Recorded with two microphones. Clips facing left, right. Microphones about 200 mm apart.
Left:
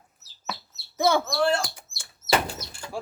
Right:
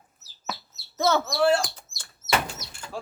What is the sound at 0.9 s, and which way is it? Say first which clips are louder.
Speech: left 1 dB; 15° left (ahead or behind).